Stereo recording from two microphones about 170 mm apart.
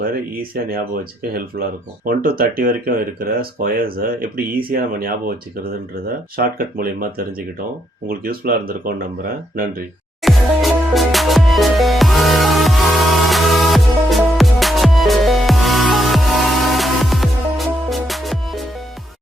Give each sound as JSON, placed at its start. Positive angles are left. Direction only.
{"t": 0.0, "sound": "speech", "side_deg": -60}
{"t": 6.3, "sound": "speech", "side_deg": -60}
{"t": 10.2, "sound": "music", "side_deg": 0}